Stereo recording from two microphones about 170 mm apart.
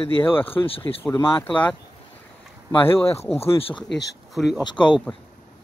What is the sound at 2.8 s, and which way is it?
Speech, 15° left (ahead or behind).